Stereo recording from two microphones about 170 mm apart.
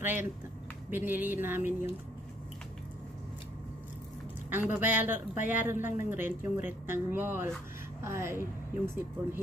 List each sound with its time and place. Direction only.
0.0 s a woman's voice: 10° right (ahead or behind)
4.7 s a woman's voice: 10° right (ahead or behind)